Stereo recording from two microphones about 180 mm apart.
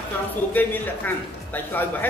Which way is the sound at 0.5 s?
10° left (ahead or behind).